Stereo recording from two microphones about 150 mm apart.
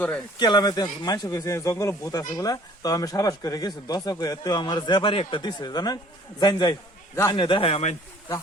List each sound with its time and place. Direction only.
0.3 s a man's voice: 30° left (ahead or behind)